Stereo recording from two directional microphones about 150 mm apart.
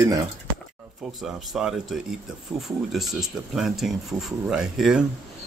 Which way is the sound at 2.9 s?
Centre (ahead or behind).